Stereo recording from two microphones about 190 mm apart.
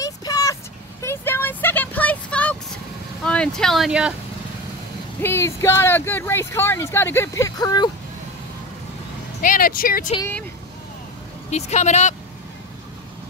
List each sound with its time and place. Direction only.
0.0 s vehicle: 20° left (ahead or behind)
1.0 s a sound: 10° left (ahead or behind)
3.3 s speech: 5° left (ahead or behind)
5.2 s speech: 15° left (ahead or behind)
9.4 s speech: 45° left (ahead or behind)
11.5 s speech: 35° left (ahead or behind)